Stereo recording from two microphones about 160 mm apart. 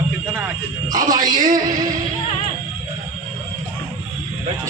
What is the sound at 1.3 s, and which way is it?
Speech, 55° right (ahead or behind).